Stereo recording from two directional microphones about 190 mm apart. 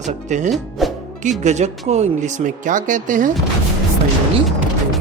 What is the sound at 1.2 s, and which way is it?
Speech, 40° right (ahead or behind).